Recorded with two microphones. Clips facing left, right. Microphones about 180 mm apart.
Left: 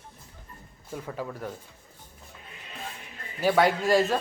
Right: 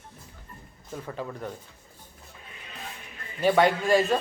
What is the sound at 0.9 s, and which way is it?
Speech, 10° left (ahead or behind).